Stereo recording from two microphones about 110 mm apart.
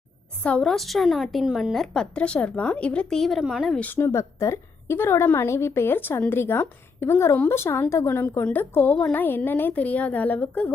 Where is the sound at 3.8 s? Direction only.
20° left (ahead or behind).